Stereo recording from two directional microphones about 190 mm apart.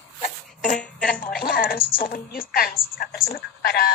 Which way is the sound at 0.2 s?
40° left (ahead or behind).